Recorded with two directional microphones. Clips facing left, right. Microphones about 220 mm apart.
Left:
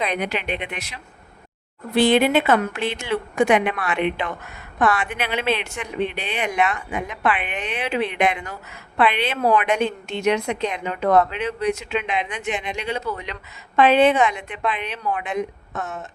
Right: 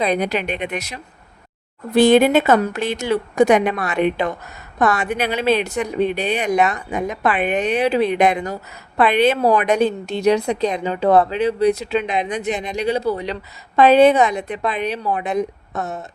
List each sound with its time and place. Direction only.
0.0 s speech: 35° right (ahead or behind)